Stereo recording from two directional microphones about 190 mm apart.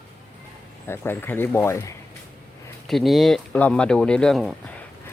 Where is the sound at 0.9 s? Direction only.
10° left (ahead or behind).